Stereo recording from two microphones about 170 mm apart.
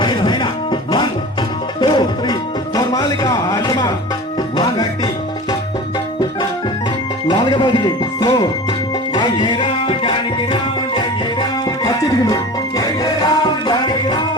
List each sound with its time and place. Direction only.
0.0 s music: 30° left (ahead or behind)
7.3 s music: 25° left (ahead or behind)